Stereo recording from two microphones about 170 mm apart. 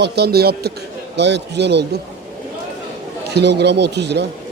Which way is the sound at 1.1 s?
90° right.